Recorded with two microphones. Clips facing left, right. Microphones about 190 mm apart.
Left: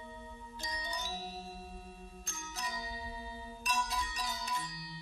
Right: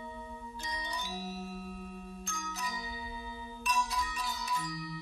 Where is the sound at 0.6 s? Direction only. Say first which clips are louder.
Even; 40° left (ahead or behind).